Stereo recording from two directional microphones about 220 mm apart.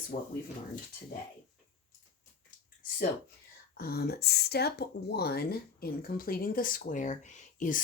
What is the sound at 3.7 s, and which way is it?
Speech, 45° left (ahead or behind).